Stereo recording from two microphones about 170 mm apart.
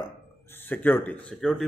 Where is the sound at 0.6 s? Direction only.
10° left (ahead or behind).